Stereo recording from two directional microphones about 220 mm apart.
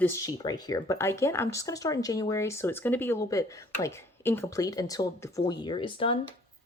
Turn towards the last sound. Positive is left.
turn(degrees=25)  # may be behind; listen again after turning